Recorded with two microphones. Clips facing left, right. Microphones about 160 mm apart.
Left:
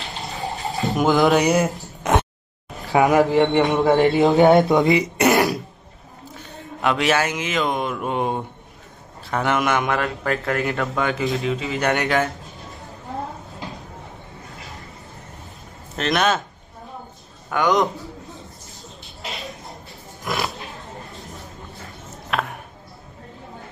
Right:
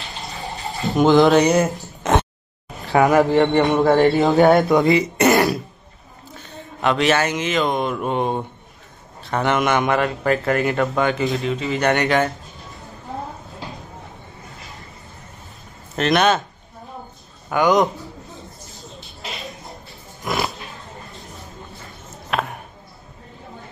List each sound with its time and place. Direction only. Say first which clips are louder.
0.8 s a man's voice: right 4 dB; 5° left (ahead or behind)
2.9 s a man's voice: right 1 dB; 5° left (ahead or behind)
6.8 s a man's voice: right 2 dB; 5° left (ahead or behind)
16.0 s a man's voice: right 3 dB; centre (ahead or behind)
17.5 s a man's voice: right 3 dB; 5° right (ahead or behind)
20.2 s pig: right 2 dB; centre (ahead or behind)
22.3 s a sound: right 1 dB; centre (ahead or behind)